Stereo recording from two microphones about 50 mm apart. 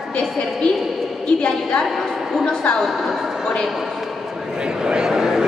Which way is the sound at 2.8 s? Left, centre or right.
Centre.